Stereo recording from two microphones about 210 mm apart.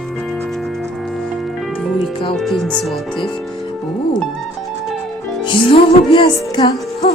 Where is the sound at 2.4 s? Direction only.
Centre (ahead or behind).